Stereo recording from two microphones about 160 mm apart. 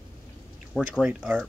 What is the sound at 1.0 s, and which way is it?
Speech, 5° right (ahead or behind).